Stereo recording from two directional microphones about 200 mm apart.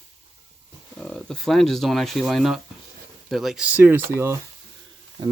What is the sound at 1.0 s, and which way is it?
Speech, 5° left (ahead or behind).